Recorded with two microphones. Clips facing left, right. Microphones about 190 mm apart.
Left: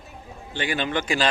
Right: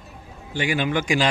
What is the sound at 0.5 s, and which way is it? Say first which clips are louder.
Speech: right 3 dB; 10° right (ahead or behind).